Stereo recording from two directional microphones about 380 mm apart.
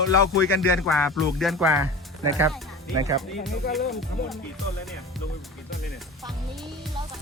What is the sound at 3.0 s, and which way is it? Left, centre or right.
Speech, centre.